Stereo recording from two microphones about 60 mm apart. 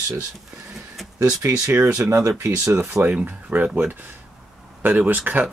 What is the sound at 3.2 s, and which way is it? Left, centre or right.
Speech, right.